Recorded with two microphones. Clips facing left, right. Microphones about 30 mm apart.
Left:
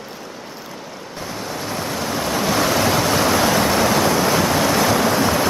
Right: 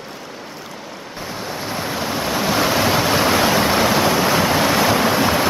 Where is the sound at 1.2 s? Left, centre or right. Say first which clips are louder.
Even; centre.